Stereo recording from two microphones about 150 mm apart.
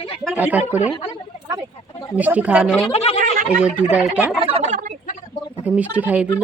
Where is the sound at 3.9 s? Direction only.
10° right (ahead or behind).